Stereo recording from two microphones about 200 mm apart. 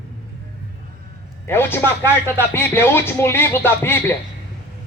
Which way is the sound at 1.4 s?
10° left (ahead or behind).